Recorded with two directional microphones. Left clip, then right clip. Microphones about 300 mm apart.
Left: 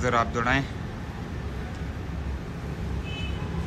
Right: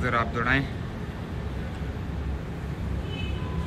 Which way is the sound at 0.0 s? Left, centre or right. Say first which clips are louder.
Left 2 dB; centre.